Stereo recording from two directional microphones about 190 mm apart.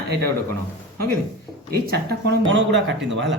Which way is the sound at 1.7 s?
60° right (ahead or behind).